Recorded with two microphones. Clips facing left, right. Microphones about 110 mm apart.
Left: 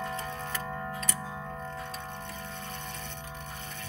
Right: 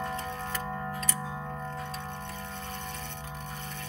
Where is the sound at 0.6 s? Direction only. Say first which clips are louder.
Right 1 dB; 10° right (ahead or behind).